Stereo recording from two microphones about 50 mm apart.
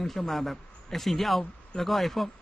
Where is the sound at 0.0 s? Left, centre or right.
Centre.